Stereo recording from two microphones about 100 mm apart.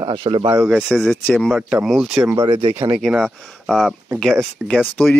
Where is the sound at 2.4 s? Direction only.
60° right (ahead or behind).